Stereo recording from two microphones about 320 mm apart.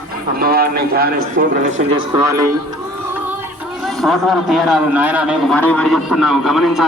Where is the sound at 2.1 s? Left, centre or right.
Centre.